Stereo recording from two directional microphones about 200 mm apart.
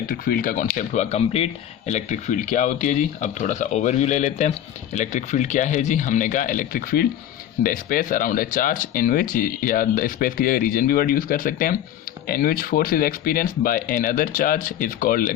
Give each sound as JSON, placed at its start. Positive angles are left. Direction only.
{"t": 0.1, "sound": "speech", "side_deg": 45}